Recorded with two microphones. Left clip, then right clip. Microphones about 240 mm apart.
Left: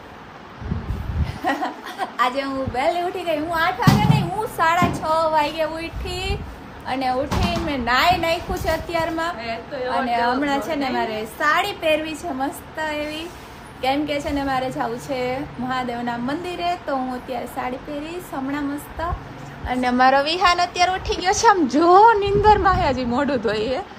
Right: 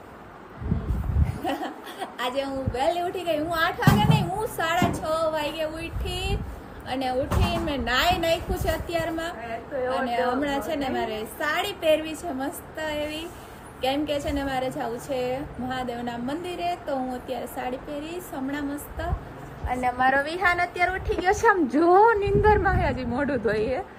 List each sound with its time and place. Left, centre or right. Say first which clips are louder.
1.5 s a woman's voice: left 7 dB; centre
19.6 s a woman's voice: left 3 dB; left
20.1 s a woman's voice: left 6 dB; centre